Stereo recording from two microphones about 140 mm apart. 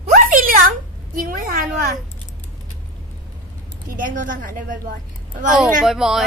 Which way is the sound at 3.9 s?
70° right (ahead or behind).